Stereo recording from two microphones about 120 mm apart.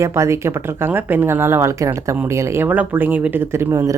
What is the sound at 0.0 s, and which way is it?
Speech, 25° right (ahead or behind).